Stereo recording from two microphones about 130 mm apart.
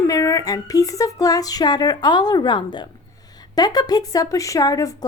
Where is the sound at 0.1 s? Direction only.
25° left (ahead or behind).